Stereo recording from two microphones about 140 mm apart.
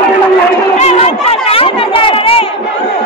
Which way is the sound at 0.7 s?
50° left (ahead or behind).